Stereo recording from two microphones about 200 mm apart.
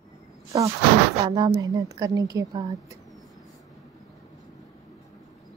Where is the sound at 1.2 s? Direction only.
25° right (ahead or behind).